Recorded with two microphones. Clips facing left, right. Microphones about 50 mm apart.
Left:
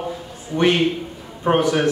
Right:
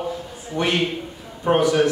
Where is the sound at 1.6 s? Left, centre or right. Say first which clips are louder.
Right 1 dB; left.